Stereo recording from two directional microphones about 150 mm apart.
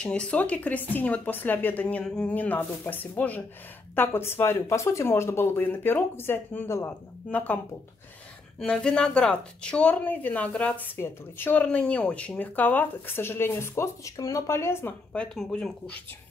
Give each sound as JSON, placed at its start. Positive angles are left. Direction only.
{"t": 0.0, "sound": "a woman's voice", "side_deg": 5}